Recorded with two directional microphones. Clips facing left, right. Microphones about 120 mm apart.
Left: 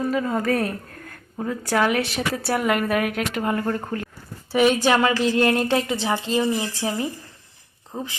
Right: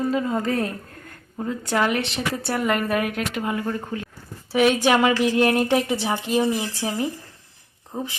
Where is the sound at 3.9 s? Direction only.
10° right (ahead or behind).